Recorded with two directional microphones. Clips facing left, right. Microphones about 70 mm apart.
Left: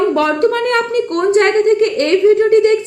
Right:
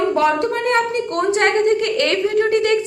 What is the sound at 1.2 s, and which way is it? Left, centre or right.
A woman's voice, left.